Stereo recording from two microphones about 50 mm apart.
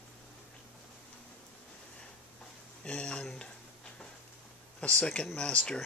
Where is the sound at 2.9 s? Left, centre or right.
Centre.